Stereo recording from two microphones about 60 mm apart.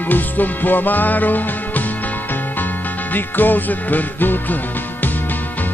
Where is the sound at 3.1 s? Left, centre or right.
Left.